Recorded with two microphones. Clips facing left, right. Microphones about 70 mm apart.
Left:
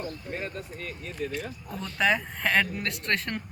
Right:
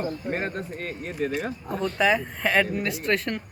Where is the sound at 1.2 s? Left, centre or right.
Right.